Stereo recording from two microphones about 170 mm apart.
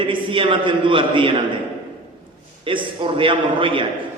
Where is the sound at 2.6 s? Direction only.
30° right (ahead or behind).